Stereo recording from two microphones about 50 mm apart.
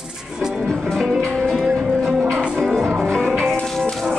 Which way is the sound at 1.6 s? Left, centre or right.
Centre.